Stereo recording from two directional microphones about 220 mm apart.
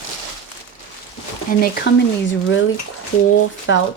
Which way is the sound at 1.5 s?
40° left (ahead or behind).